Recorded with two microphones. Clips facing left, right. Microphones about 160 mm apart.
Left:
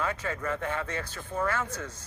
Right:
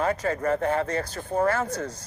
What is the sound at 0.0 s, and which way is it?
Speech, 40° right (ahead or behind).